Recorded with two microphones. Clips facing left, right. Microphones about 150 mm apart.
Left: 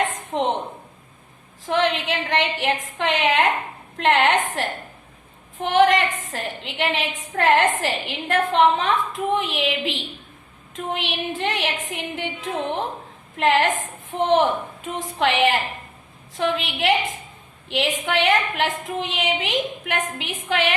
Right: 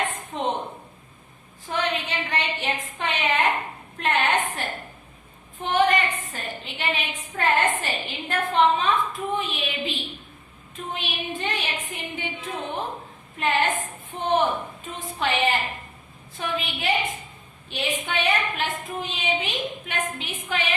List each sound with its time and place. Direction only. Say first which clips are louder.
0.3 s a sound: left 6 dB; 75° left (ahead or behind)
1.6 s a woman's voice: left 6 dB; 90° left
20.5 s a woman's voice: left 6 dB; 80° left